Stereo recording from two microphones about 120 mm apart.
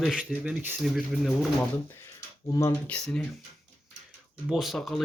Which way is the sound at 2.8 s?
5° left (ahead or behind).